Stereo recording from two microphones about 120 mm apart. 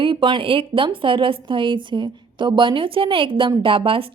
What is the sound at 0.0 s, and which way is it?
Speech, 45° right (ahead or behind).